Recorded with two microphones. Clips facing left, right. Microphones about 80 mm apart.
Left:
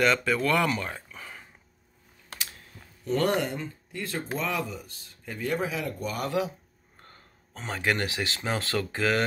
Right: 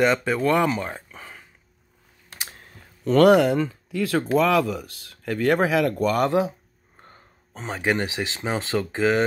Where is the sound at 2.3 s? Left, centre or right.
Right.